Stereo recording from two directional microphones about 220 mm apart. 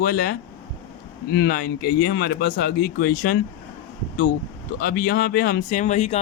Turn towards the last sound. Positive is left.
turn(degrees=30)  # may be behind; listen again after turning